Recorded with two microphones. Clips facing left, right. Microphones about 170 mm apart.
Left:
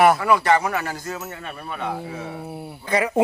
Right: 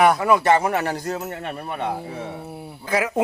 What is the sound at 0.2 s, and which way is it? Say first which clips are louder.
Speech: right 1 dB; 20° right (ahead or behind).